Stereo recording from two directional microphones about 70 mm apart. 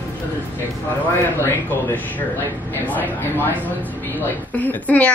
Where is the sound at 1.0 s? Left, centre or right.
Left.